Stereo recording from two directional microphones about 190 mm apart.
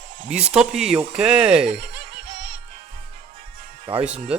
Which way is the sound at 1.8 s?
60° right (ahead or behind).